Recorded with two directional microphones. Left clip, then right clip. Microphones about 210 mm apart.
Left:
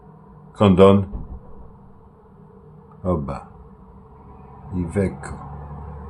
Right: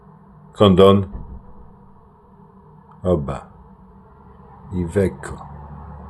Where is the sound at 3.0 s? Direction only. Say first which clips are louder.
Right 4 dB; 10° right (ahead or behind).